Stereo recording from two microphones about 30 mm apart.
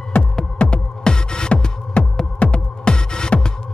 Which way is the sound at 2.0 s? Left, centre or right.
Left.